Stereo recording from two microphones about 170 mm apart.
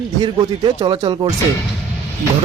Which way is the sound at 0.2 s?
25° right (ahead or behind).